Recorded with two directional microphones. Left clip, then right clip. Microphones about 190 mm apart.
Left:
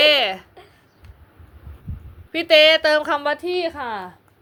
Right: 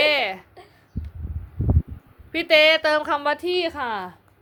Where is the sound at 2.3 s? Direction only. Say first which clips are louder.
Left 3 dB; 10° left (ahead or behind).